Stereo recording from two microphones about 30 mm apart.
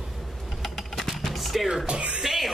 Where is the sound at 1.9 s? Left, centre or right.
Right.